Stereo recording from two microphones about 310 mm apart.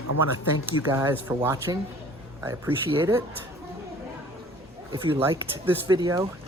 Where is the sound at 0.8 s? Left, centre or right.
Centre.